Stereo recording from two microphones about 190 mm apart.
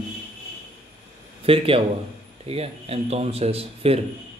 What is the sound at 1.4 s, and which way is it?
A man's voice, 30° right (ahead or behind).